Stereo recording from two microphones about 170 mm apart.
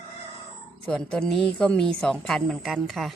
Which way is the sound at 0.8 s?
5° left (ahead or behind).